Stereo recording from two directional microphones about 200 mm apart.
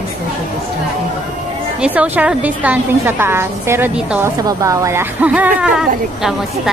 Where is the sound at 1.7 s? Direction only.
5° right (ahead or behind).